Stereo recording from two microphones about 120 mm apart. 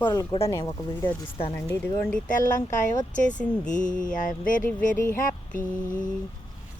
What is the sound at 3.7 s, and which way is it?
Mantra, 90° left.